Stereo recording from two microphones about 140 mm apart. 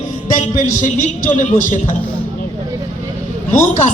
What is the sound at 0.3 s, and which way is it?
Speech, 60° left (ahead or behind).